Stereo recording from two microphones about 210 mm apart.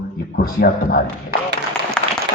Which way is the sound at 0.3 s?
45° left (ahead or behind).